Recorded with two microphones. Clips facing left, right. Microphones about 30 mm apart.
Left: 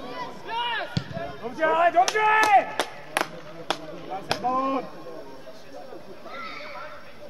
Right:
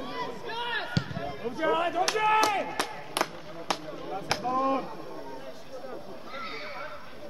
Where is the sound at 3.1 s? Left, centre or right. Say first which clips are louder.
Left 3 dB; left.